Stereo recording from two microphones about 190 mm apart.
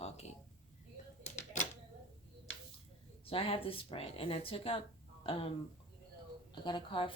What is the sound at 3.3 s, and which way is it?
Speech, 30° left (ahead or behind).